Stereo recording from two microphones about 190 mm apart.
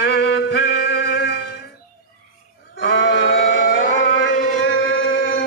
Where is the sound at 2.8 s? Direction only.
80° left.